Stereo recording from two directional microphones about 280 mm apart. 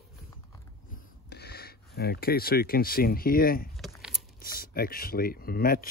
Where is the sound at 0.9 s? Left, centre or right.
Left.